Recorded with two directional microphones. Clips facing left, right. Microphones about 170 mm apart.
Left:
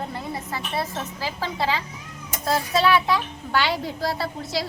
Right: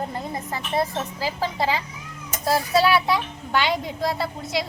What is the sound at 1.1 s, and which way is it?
A child's voice, 15° right (ahead or behind).